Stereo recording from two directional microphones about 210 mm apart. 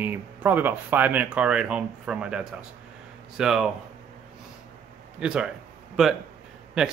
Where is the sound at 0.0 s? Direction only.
10° right (ahead or behind).